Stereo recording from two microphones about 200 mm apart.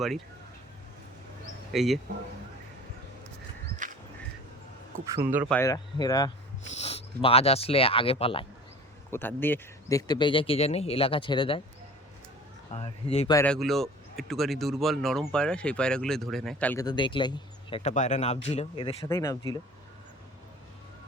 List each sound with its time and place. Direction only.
1.7 s speech: centre (ahead or behind)
3.8 s a sound: 40° right (ahead or behind)
5.1 s speech: 10° right (ahead or behind)
5.5 s speech: 15° left (ahead or behind)
6.7 s speech: 30° left (ahead or behind)
9.0 s speech: 10° left (ahead or behind)
12.7 s speech: 30° left (ahead or behind)
13.3 s speech: 5° left (ahead or behind)
16.8 s speech: 25° left (ahead or behind)
19.0 s speech: 15° left (ahead or behind)